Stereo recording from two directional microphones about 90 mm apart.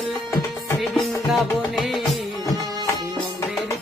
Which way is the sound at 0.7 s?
Centre (ahead or behind).